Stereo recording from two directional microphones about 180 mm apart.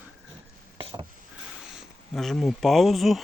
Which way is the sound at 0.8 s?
30° right (ahead or behind).